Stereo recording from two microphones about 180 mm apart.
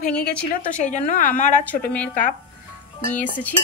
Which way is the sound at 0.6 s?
45° left (ahead or behind).